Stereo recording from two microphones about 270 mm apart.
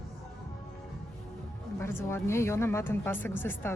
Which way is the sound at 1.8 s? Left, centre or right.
Centre.